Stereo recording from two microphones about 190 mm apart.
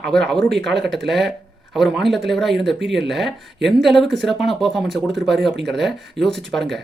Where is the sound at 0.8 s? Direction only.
Centre (ahead or behind).